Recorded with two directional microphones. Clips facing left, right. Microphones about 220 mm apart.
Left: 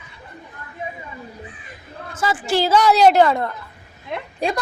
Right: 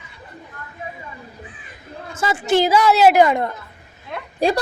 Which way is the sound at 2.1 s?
25° right (ahead or behind).